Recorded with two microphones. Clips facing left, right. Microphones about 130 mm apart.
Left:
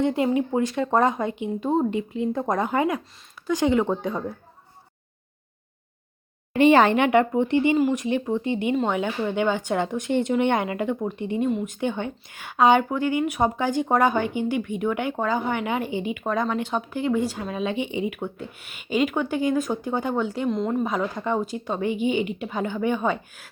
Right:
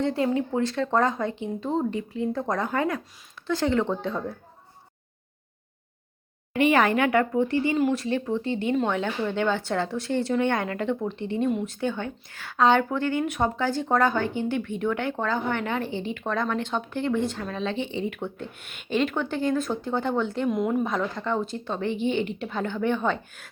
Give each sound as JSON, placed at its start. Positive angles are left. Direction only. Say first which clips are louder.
{"t": 0.0, "sound": "a woman's voice", "louder": "left 3 dB", "side_deg": 15}
{"t": 6.5, "sound": "a woman's voice", "louder": "left 4 dB", "side_deg": 30}
{"t": 20.5, "sound": "a woman's voice", "louder": "right 1 dB", "side_deg": -5}
{"t": 20.8, "sound": "a woman's voice", "louder": "left 2 dB", "side_deg": 10}